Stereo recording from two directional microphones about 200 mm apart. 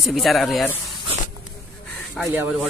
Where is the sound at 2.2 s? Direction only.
10° right (ahead or behind).